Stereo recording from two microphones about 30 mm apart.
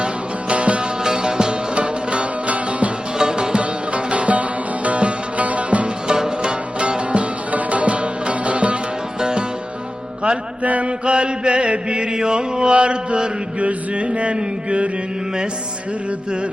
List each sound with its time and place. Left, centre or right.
0.0 s music: right
1.0 s music: right
1.7 s music: right
3.2 s music: right
3.6 s music: right
6.1 s music: right
7.5 s music: right
10.6 s mantra: right
10.8 s chant: right
12.7 s mantra: right
13.6 s music: right